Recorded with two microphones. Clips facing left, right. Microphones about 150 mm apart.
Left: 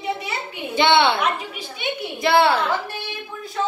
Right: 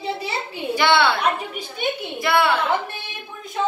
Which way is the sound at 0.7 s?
25° left (ahead or behind).